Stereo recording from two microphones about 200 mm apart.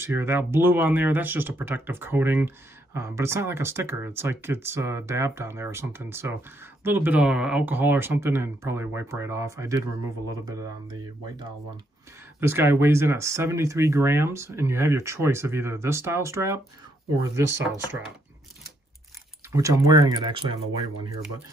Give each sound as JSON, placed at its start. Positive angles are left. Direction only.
{"t": 0.0, "sound": "speech", "side_deg": -10}
{"t": 12.4, "sound": "speech", "side_deg": -10}
{"t": 19.5, "sound": "speech", "side_deg": -15}